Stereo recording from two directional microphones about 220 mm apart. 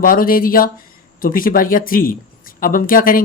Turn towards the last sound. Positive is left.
turn(degrees=40)  # may be behind; listen again after turning